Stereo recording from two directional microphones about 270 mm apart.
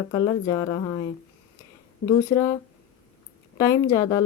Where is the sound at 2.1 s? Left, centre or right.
Centre.